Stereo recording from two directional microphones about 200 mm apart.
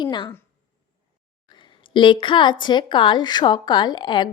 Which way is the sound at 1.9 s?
25° left (ahead or behind).